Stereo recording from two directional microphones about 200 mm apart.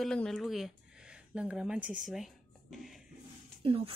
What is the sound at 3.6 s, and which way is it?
Speech, 25° right (ahead or behind).